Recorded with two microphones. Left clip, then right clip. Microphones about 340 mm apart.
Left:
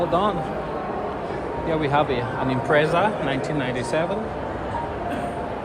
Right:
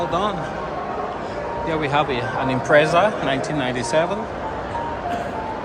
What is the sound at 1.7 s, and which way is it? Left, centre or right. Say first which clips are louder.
A man's voice: even; centre.